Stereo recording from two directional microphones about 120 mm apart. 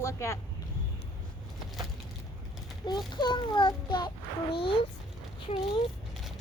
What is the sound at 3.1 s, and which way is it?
Speech, 40° left (ahead or behind).